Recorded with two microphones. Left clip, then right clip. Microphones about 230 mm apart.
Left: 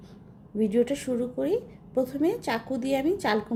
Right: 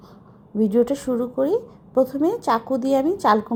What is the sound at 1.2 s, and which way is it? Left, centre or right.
A woman's voice, centre.